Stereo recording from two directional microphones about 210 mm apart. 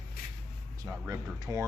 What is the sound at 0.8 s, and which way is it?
Speech, 15° right (ahead or behind).